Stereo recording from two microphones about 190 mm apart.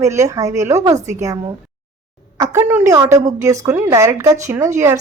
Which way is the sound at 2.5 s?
10° right (ahead or behind).